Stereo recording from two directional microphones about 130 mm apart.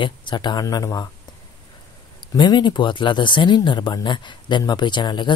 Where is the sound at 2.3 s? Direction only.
35° left (ahead or behind).